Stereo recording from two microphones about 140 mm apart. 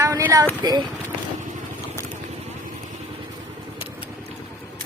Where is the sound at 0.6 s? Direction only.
30° right (ahead or behind).